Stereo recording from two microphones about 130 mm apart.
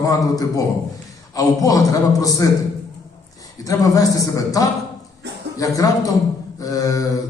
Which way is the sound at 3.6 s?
25° left (ahead or behind).